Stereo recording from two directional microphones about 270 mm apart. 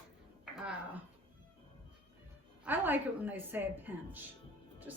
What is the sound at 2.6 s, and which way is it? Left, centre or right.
A woman's voice, centre.